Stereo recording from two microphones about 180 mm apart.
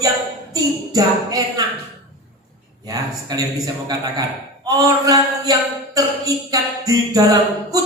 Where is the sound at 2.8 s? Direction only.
20° right (ahead or behind).